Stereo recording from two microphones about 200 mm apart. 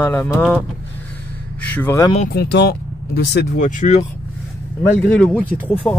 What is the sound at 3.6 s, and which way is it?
Speech, 40° left (ahead or behind).